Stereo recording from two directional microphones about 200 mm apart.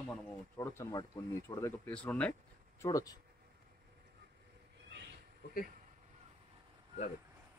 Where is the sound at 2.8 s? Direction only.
15° left (ahead or behind).